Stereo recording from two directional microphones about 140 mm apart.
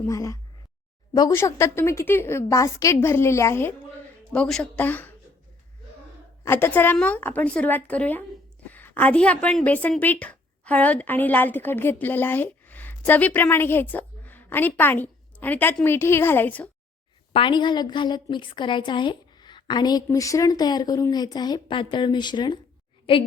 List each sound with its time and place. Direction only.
0.0 s a woman's voice: 20° left (ahead or behind)
4.3 s a woman's voice: 5° left (ahead or behind)
6.4 s a woman's voice: 15° left (ahead or behind)
17.3 s a woman's voice: 35° left (ahead or behind)